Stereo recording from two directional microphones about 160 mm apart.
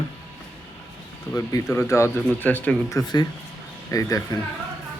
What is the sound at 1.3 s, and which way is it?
Speech, 20° left (ahead or behind).